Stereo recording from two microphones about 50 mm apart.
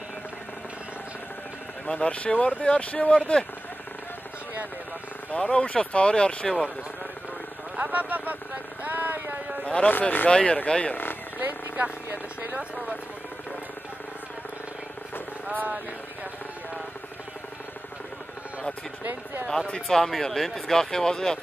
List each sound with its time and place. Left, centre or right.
1.9 s speech: left
5.3 s speech: left
7.7 s speech: right
8.8 s a sound: right
9.8 s speech: left
11.3 s a sound: right
15.5 s speech: right
19.7 s speech: centre